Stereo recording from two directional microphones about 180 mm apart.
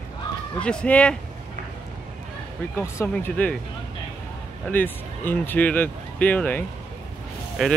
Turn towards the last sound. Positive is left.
turn(degrees=0)  # may be behind; listen again after turning